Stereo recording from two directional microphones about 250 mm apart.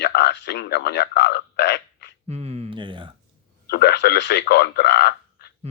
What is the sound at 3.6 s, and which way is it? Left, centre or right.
Speech, left.